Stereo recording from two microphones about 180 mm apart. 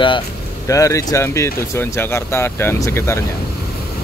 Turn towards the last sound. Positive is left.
turn(degrees=15)  # may be behind; listen again after turning